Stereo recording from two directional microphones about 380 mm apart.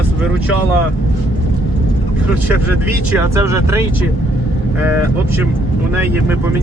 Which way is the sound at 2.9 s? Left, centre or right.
Centre.